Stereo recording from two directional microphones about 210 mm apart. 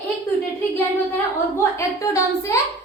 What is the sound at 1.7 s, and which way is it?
Speech, 15° left (ahead or behind).